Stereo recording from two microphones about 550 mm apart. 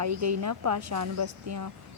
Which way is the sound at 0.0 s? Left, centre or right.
Right.